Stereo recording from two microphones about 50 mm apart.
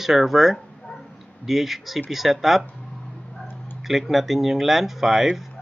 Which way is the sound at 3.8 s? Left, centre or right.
Centre.